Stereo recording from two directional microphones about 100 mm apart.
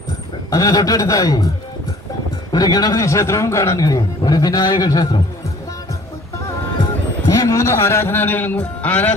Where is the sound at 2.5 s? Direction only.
40° left (ahead or behind).